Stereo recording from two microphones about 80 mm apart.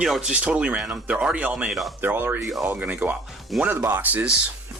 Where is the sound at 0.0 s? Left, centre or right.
Centre.